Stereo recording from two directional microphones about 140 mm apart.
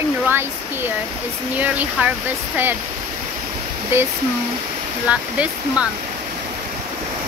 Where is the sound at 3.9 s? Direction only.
15° right (ahead or behind).